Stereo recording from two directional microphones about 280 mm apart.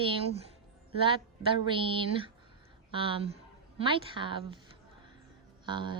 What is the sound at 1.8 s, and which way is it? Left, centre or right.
Speech, centre.